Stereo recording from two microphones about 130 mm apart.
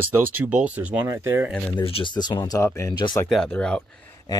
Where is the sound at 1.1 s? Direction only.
20° right (ahead or behind).